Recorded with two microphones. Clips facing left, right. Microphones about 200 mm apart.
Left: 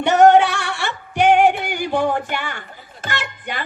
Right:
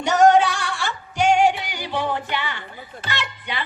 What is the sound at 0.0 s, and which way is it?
Music, 60° left (ahead or behind).